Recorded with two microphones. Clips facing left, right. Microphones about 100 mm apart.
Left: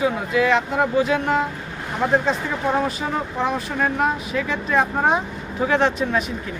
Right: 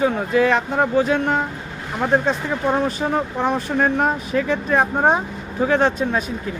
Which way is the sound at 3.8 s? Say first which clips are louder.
Right 1 dB; 35° right (ahead or behind).